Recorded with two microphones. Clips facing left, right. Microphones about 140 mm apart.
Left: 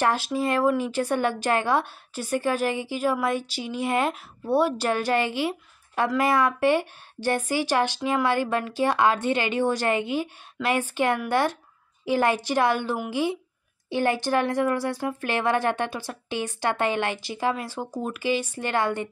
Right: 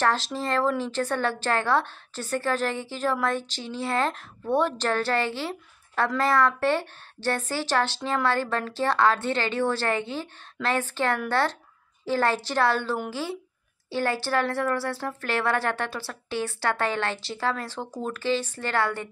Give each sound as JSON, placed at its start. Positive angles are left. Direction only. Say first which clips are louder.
{"t": 0.0, "sound": "speech", "louder": "left 2 dB", "side_deg": 10}